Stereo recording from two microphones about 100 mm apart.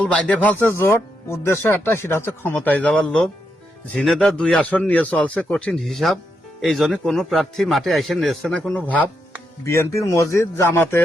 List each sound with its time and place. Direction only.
0.0 s speech: 10° left (ahead or behind)
3.9 s a man's voice: centre (ahead or behind)
8.5 s a man's voice: 15° left (ahead or behind)
9.6 s speech: 30° left (ahead or behind)